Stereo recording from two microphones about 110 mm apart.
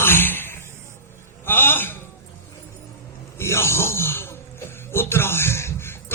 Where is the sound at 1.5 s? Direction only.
20° left (ahead or behind).